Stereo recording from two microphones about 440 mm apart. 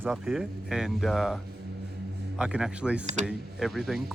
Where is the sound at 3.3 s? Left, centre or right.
Centre.